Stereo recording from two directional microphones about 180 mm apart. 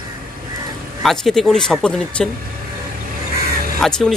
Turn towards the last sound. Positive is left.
turn(degrees=5)  # may be behind; listen again after turning